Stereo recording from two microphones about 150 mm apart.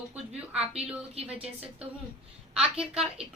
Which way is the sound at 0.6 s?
40° right (ahead or behind).